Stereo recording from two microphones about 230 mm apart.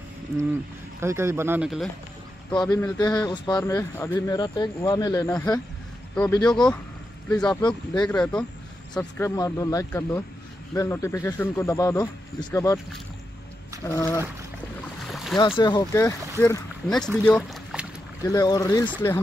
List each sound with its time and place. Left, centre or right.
1.0 s speech: centre
2.5 s speech: centre
6.5 s speech: centre
13.8 s speech: centre
15.0 s boat: centre
15.3 s speech: centre
16.9 s speech: centre
18.2 s speech: centre